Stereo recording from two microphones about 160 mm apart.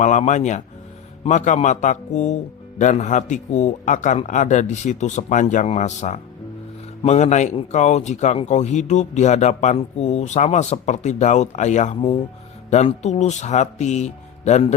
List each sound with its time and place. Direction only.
0.0 s speech: 50° left (ahead or behind)
11.9 s speech: 35° left (ahead or behind)
12.7 s speech: 45° left (ahead or behind)